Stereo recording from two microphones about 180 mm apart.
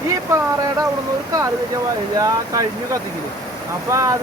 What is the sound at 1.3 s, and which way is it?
Speech, 20° right (ahead or behind).